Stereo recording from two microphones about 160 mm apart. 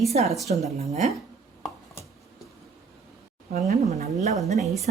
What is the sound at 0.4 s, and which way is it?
Speech, 45° right (ahead or behind).